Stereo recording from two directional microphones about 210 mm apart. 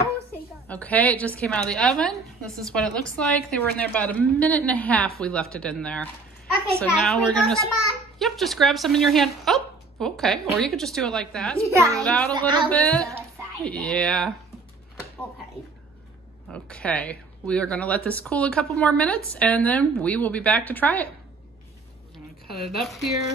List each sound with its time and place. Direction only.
0.7 s a woman's voice: 5° left (ahead or behind)
11.5 s a child's voice: 15° right (ahead or behind)
12.0 s a woman's voice: 5° left (ahead or behind)
12.3 s a man's voice: 20° right (ahead or behind)
12.6 s a woman's voice: 5° left (ahead or behind)
16.4 s speech: 5° left (ahead or behind)
22.5 s a woman's voice: centre (ahead or behind)